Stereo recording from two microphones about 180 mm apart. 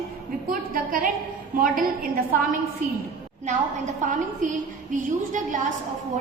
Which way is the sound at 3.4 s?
40° right (ahead or behind).